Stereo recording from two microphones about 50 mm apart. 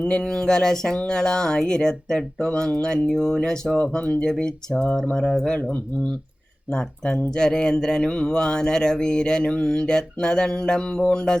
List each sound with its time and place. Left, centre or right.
0.2 s speech: centre
3.8 s speech: left
6.7 s speech: centre